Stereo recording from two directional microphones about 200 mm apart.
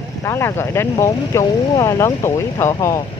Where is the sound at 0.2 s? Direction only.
15° left (ahead or behind).